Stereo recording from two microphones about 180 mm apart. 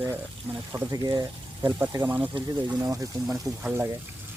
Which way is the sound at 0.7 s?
20° right (ahead or behind).